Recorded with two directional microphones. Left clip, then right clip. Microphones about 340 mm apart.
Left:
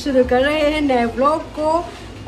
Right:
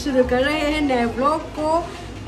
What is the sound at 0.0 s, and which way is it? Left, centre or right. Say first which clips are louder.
A woman's voice: left 3 dB; centre.